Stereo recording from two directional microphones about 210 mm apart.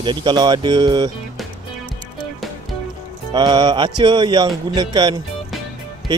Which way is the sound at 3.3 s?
20° right (ahead or behind).